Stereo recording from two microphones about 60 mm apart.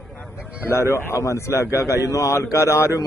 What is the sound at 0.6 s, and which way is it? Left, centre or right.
A man's voice, left.